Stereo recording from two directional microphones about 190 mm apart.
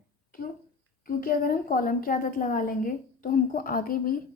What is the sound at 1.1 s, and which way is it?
A woman's voice, 50° left (ahead or behind).